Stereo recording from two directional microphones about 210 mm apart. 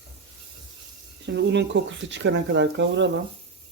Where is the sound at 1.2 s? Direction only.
55° right (ahead or behind).